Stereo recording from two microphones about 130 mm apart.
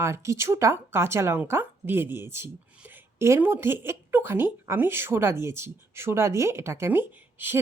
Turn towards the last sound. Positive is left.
turn(degrees=-15)  # may be behind; listen again after turning